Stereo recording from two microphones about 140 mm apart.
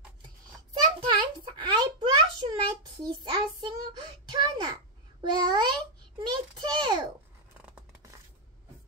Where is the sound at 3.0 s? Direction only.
30° right (ahead or behind).